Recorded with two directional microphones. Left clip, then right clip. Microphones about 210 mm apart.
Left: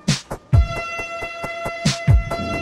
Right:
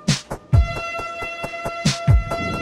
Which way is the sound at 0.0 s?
5° right (ahead or behind).